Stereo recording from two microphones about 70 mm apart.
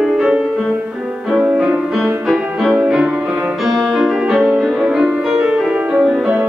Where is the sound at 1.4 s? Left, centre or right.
Centre.